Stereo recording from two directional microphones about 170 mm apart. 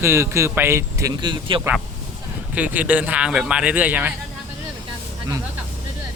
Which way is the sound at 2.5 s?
10° right (ahead or behind).